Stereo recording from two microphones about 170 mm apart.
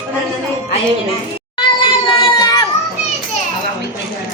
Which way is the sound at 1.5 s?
30° left (ahead or behind).